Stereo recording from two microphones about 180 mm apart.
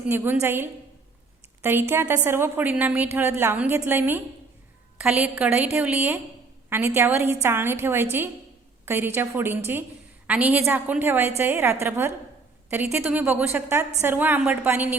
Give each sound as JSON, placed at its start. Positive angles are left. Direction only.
{"t": 0.1, "sound": "a woman's voice", "side_deg": -10}